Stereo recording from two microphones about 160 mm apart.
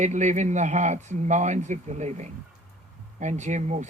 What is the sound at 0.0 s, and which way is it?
Speech, 50° right (ahead or behind).